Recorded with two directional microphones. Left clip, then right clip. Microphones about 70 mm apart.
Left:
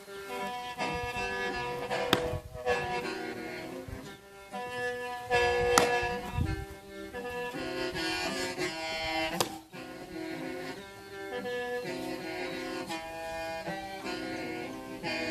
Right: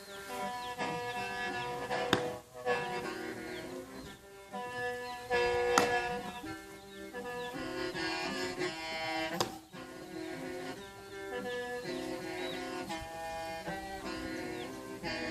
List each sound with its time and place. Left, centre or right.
0.3 s music: centre
0.8 s music: centre
2.6 s music: centre
2.9 s music: left
4.5 s music: centre
5.9 s music: centre
7.3 s music: centre
7.9 s music: centre
10.2 s music: centre
11.3 s music: centre
12.0 s music: centre
14.0 s music: left